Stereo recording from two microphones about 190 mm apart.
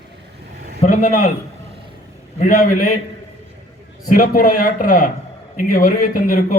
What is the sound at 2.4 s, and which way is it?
Speech, 45° left (ahead or behind).